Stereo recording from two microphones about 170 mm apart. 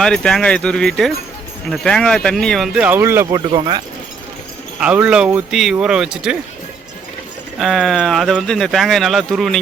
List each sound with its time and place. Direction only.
0.0 s speech: 5° left (ahead or behind); by 3.2 s 15° right (ahead or behind)
3.3 s speech: 25° right (ahead or behind)
4.8 s speech: 5° right (ahead or behind)
7.6 s speech: centre (ahead or behind)